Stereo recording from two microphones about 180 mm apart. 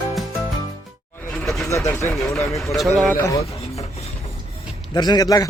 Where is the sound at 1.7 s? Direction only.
15° left (ahead or behind).